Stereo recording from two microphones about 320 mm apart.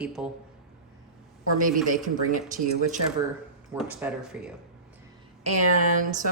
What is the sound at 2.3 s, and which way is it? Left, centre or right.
Speech, right.